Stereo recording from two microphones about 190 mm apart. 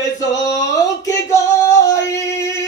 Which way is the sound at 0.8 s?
15° left (ahead or behind).